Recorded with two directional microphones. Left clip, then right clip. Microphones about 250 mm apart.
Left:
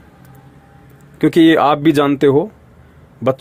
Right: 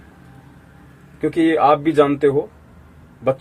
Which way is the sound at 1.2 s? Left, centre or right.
Left.